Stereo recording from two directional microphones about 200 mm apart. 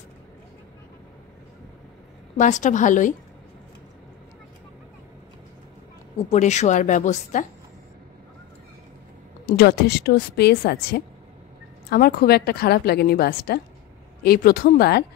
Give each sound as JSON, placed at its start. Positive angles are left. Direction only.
{"t": 2.3, "sound": "a woman's voice", "side_deg": 40}
{"t": 6.1, "sound": "a woman's voice", "side_deg": 35}
{"t": 9.5, "sound": "a woman's voice", "side_deg": 50}